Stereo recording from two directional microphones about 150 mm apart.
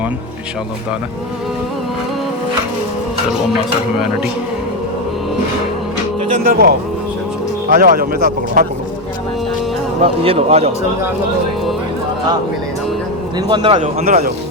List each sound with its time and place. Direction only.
6.4 s speech: 80° right
10.0 s speech: 40° right (ahead or behind)
13.5 s speech: 30° right (ahead or behind)
13.7 s a man's voice: 55° right (ahead or behind)